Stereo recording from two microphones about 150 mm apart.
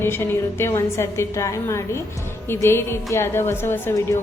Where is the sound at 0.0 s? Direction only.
15° left (ahead or behind).